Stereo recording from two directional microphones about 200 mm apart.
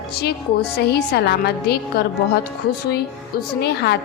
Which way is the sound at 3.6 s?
55° left (ahead or behind).